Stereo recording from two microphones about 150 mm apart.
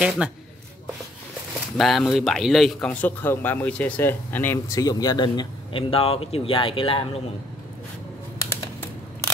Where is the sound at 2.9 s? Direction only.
10° left (ahead or behind); by 7.2 s 40° left (ahead or behind).